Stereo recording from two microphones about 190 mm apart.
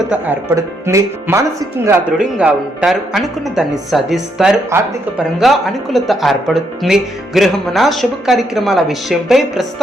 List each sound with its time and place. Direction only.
0.1 s speech: 10° right (ahead or behind)